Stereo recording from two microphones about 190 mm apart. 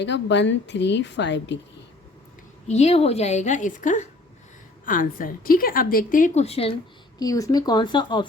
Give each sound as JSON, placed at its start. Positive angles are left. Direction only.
{"t": 0.0, "sound": "a woman's voice", "side_deg": 70}
{"t": 2.6, "sound": "a woman's voice", "side_deg": 35}
{"t": 7.2, "sound": "speech", "side_deg": 20}